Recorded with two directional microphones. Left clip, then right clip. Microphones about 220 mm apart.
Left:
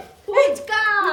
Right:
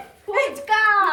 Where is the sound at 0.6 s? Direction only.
Centre (ahead or behind).